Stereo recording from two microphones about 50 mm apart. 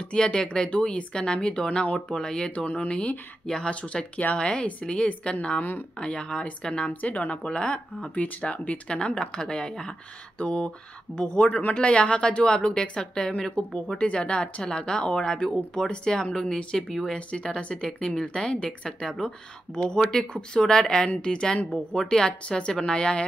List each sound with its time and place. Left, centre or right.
0.1 s speech: centre
2.6 s speech: left
3.4 s a woman's voice: centre
3.9 s speech: left
4.4 s speech: left
8.2 s a woman's voice: left